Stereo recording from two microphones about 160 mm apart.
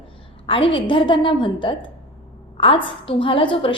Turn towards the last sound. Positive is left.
turn(degrees=30)  # may be behind; listen again after turning